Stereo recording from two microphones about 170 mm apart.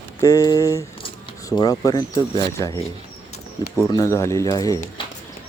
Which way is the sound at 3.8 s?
20° left (ahead or behind).